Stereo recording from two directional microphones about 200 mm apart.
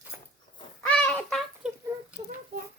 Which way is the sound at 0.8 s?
5° left (ahead or behind).